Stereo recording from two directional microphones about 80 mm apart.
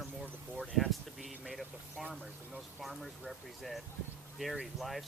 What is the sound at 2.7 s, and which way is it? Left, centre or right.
Speech, centre.